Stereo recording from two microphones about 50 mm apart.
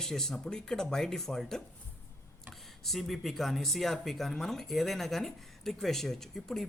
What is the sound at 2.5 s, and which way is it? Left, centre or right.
Speech, centre.